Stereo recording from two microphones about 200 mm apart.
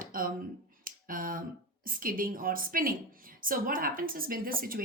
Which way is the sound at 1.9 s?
45° right (ahead or behind).